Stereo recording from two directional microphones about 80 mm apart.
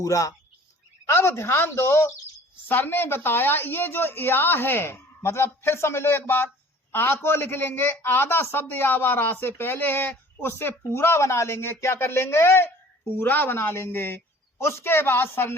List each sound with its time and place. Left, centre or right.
0.0 s speech: left
1.0 s a woman's voice: left